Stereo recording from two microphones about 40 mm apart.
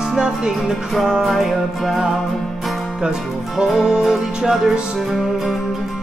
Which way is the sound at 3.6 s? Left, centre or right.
Centre.